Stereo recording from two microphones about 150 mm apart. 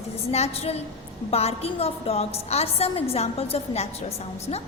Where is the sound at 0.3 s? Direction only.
45° left (ahead or behind).